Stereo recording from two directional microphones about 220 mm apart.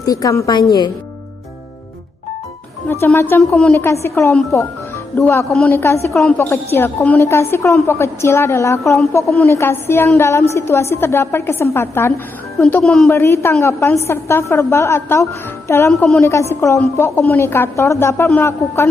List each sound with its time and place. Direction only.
0.0 s a woman's voice: 15° left (ahead or behind)
2.9 s a woman's voice: 10° left (ahead or behind)
15.9 s a woman's voice: 5° left (ahead or behind)
16.2 s a woman's voice: 15° left (ahead or behind)